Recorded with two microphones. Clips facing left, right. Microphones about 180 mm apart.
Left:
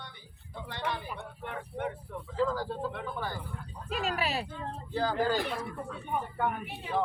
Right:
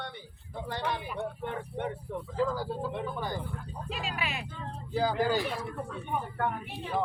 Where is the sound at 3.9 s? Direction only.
45° left (ahead or behind).